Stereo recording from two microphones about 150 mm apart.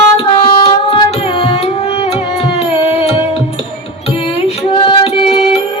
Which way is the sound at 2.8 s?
40° left (ahead or behind).